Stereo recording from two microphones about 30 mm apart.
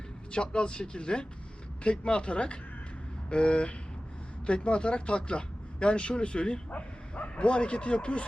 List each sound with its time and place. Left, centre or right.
0.5 s speech: left